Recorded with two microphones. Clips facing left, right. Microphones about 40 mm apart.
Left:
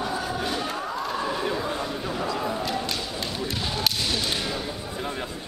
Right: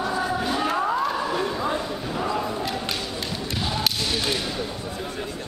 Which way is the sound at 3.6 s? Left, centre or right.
Centre.